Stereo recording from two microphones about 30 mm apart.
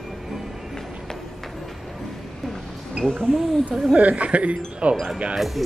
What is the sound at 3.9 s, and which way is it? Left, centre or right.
Speech, right.